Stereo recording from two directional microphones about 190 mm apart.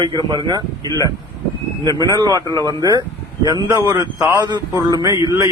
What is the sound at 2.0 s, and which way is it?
A man's voice, 20° right (ahead or behind).